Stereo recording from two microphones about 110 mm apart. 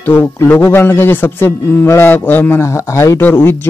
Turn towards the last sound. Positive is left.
turn(degrees=20)  # may be behind; listen again after turning